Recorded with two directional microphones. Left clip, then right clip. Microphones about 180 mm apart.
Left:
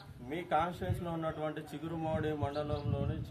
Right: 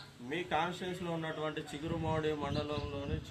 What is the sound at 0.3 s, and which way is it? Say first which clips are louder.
A man's voice: left 1 dB; 35° left (ahead or behind).